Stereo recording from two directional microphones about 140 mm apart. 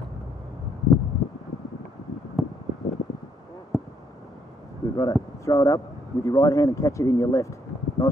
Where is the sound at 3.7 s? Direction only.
5° left (ahead or behind).